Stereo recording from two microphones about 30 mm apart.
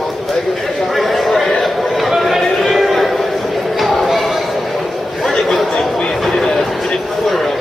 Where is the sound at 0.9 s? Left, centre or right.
Centre.